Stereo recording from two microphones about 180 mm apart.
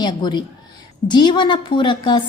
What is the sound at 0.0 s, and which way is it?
A woman's voice, 25° left (ahead or behind).